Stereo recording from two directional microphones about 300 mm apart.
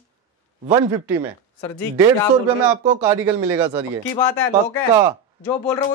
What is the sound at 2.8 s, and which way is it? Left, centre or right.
Speech, centre.